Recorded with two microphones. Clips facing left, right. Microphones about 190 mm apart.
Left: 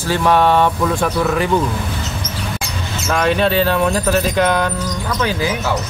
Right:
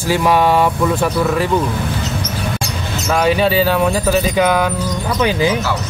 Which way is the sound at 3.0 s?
5° right (ahead or behind).